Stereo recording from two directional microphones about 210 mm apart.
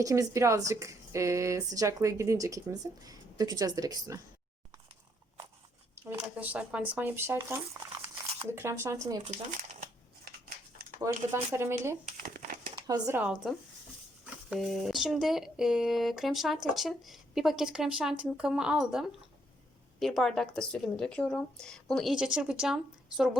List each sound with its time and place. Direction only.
0.0 s speech: 15° right (ahead or behind)
6.1 s speech: 5° right (ahead or behind)
11.3 s speech: 10° right (ahead or behind)
12.0 s crumpling: 40° right (ahead or behind)
12.7 s speech: 15° right (ahead or behind)
14.5 s speech: centre (ahead or behind)